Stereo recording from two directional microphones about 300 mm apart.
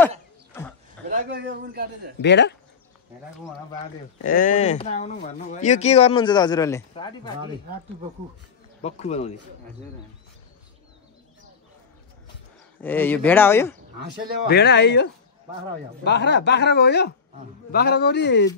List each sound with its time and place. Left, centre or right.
1.1 s a man's voice: right
2.2 s speech: left
4.2 s speech: left
8.8 s speech: left
12.8 s speech: centre
14.5 s speech: left